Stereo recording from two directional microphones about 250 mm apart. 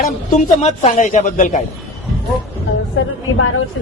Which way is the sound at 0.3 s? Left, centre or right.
Left.